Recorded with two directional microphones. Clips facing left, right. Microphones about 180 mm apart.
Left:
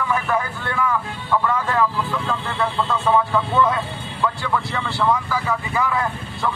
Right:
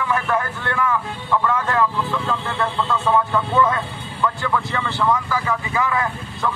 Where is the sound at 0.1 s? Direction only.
5° left (ahead or behind).